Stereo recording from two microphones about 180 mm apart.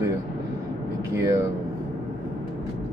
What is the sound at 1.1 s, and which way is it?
Mantra, 15° right (ahead or behind).